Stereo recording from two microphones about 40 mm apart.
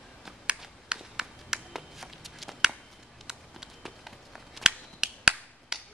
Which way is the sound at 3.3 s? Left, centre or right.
Centre.